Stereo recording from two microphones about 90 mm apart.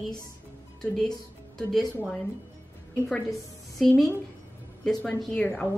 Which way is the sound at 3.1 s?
Centre (ahead or behind).